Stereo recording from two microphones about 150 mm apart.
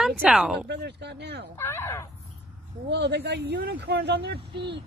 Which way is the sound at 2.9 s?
90° right.